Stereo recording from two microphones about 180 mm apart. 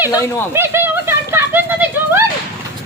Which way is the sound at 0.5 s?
15° right (ahead or behind).